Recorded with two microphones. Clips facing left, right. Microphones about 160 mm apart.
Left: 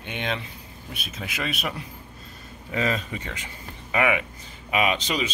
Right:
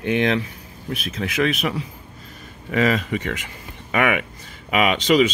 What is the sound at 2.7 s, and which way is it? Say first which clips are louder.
Speech: right 7 dB; 90° right.